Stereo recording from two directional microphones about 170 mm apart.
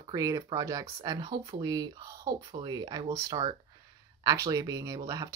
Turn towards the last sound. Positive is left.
turn(degrees=-20)  # may be behind; listen again after turning